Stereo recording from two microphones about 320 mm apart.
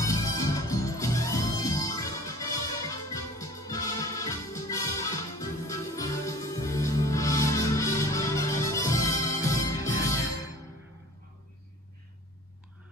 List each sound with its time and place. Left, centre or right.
0.0 s music: centre